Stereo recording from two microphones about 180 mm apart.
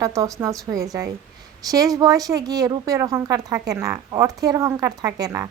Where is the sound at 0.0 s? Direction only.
20° right (ahead or behind).